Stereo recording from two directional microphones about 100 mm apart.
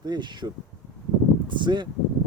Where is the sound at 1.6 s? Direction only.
50° right (ahead or behind).